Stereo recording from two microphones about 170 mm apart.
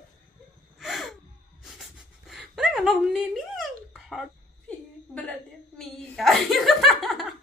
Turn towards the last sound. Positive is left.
turn(degrees=0)  # may be behind; listen again after turning